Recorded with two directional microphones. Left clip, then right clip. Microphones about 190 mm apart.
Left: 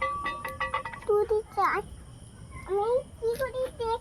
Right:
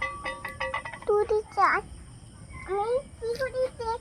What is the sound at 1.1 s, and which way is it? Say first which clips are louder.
Speech: right 2 dB; 50° right (ahead or behind).